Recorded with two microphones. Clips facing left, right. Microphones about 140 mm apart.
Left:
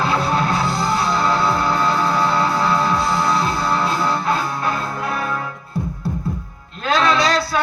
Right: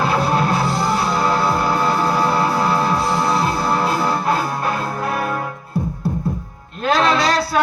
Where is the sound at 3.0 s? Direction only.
35° right (ahead or behind).